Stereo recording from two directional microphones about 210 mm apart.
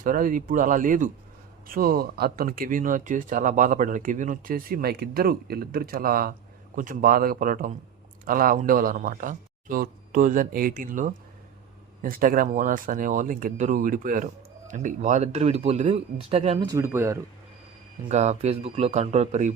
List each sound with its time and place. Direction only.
0.0 s speech: 40° right (ahead or behind)
16.6 s speech: 15° right (ahead or behind)
18.1 s speech: 30° right (ahead or behind)